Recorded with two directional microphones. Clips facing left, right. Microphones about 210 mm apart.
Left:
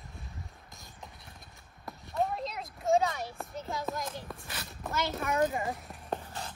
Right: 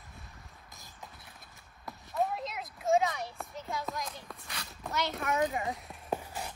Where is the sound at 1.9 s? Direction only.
Centre (ahead or behind).